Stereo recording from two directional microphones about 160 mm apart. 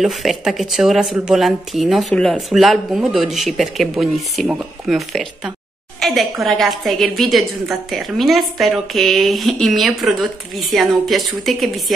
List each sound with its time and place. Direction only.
0.0 s speech: centre (ahead or behind)